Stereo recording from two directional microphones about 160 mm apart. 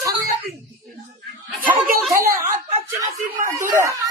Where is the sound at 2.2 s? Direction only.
60° right (ahead or behind).